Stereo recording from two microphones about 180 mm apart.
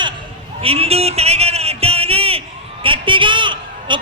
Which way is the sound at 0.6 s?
35° right (ahead or behind).